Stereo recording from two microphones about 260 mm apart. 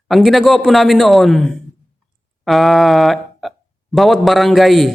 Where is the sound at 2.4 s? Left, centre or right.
Centre.